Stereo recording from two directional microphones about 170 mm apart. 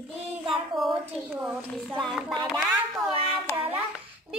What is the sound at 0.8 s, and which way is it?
Speech, centre (ahead or behind).